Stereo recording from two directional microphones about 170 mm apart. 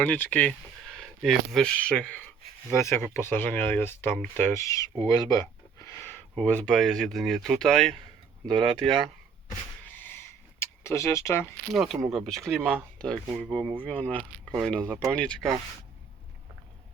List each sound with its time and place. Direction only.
0.0 s speech: 10° left (ahead or behind)
8.4 s speech: 30° right (ahead or behind)
9.8 s a sound: 10° left (ahead or behind)
11.7 s speech: centre (ahead or behind)
14.8 s speech: 15° right (ahead or behind)
15.1 s speech: 5° left (ahead or behind)